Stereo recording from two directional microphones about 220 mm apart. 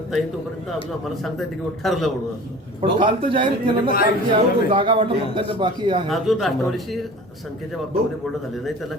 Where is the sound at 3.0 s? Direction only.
20° right (ahead or behind).